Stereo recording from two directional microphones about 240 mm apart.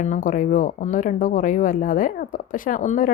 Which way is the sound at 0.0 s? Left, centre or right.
Left.